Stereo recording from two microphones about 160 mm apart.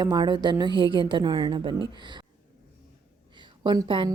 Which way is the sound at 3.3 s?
30° right (ahead or behind).